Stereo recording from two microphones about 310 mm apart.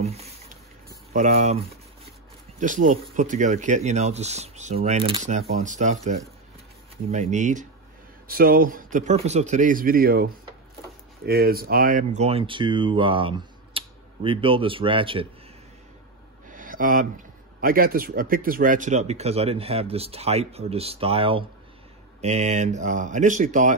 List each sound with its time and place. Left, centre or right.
0.0 s speech: centre
2.6 s speech: right
7.1 s speech: right
16.4 s a sound: right
17.6 s speech: right